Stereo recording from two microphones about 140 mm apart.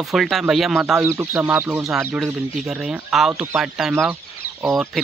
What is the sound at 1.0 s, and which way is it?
Speech, 20° right (ahead or behind).